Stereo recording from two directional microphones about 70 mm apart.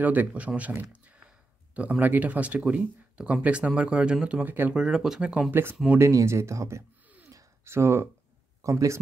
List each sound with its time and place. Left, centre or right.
0.0 s speech: right
4.7 s speech: centre
5.5 s speech: right
5.9 s speech: right